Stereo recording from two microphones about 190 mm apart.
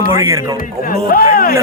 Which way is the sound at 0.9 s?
50° left (ahead or behind).